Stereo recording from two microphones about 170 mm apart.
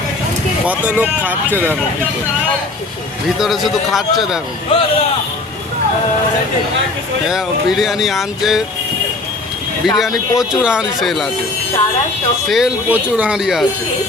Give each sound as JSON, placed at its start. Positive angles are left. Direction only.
{"t": 0.6, "sound": "speech", "side_deg": -10}
{"t": 3.3, "sound": "speech", "side_deg": 0}
{"t": 4.7, "sound": "speech", "side_deg": 30}
{"t": 7.3, "sound": "speech", "side_deg": 0}
{"t": 9.8, "sound": "speech", "side_deg": 0}
{"t": 12.5, "sound": "speech", "side_deg": -5}